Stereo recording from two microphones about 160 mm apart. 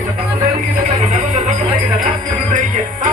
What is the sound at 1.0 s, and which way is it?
Music, 50° right (ahead or behind).